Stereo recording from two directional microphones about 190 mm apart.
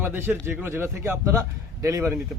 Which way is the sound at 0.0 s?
10° right (ahead or behind).